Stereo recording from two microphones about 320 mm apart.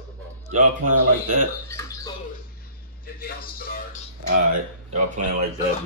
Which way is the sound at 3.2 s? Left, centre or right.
Left.